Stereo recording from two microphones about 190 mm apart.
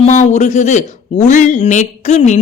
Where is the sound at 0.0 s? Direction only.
40° left (ahead or behind).